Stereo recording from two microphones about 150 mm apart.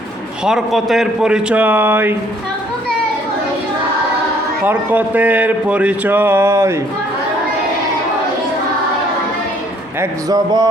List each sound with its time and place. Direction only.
0.4 s speech: centre (ahead or behind)
4.6 s speech: 10° right (ahead or behind)
10.0 s speech: 25° right (ahead or behind)